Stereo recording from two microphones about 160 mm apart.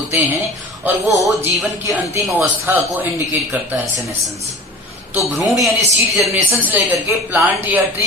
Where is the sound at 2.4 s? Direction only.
10° right (ahead or behind).